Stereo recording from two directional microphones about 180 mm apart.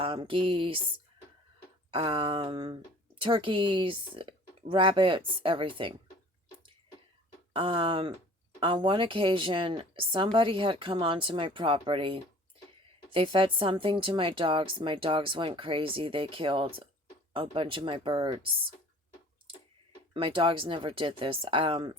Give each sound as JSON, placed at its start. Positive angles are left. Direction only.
{"t": 0.0, "sound": "speech", "side_deg": -30}
{"t": 1.9, "sound": "speech", "side_deg": -25}
{"t": 7.5, "sound": "speech", "side_deg": -30}
{"t": 20.1, "sound": "speech", "side_deg": -30}